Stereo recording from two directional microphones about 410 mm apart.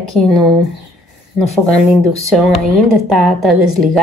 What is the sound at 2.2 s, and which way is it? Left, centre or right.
Speech, centre.